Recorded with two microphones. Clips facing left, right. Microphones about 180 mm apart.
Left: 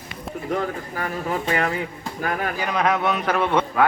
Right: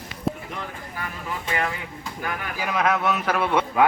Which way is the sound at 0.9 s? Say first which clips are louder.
Left 5 dB; 45° left (ahead or behind).